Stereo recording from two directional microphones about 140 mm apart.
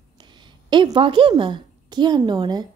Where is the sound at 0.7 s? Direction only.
35° right (ahead or behind).